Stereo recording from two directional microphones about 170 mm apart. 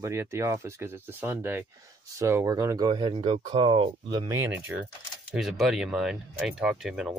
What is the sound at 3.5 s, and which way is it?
Speech, 30° right (ahead or behind).